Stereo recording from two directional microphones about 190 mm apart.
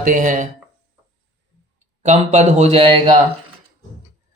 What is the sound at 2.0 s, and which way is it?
Speech, 40° right (ahead or behind).